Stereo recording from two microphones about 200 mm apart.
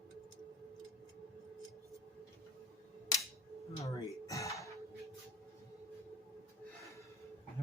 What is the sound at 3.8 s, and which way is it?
Music, 15° left (ahead or behind).